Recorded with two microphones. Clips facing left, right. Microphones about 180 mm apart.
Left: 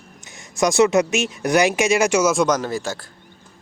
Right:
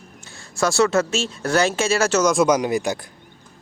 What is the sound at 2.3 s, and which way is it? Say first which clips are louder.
Speech: right 2 dB; 10° right (ahead or behind).